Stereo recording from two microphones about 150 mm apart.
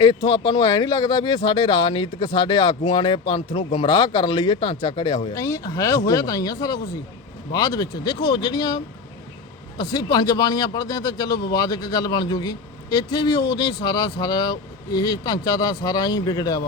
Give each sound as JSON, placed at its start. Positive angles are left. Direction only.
{"t": 0.0, "sound": "speech", "side_deg": 30}